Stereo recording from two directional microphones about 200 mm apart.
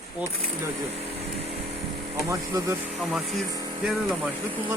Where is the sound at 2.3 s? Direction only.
15° right (ahead or behind).